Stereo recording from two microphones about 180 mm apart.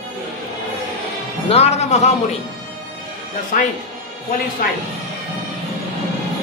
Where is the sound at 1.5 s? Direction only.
35° left (ahead or behind).